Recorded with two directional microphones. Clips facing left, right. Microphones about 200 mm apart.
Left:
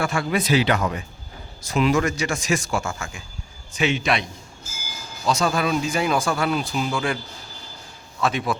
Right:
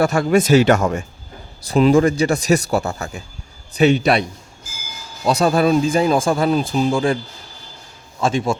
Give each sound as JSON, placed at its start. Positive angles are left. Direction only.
{"t": 0.0, "sound": "speech", "side_deg": -40}
{"t": 1.6, "sound": "speech", "side_deg": -35}
{"t": 8.2, "sound": "a man's voice", "side_deg": -30}